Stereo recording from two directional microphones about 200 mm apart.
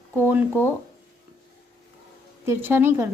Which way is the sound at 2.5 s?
10° right (ahead or behind).